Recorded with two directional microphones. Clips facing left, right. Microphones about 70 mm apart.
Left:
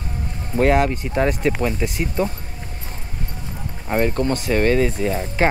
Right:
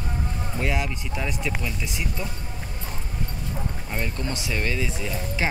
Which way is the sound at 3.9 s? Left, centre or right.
Left.